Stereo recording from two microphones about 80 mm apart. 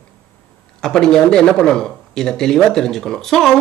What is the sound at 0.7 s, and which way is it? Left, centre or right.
A man's voice, centre.